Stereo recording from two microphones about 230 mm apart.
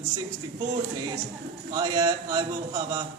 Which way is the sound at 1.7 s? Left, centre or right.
Centre.